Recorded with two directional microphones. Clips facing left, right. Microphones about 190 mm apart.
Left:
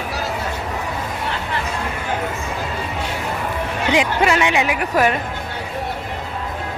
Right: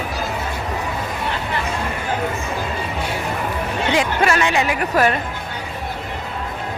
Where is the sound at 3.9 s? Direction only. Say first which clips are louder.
Left 1 dB; 15° left (ahead or behind).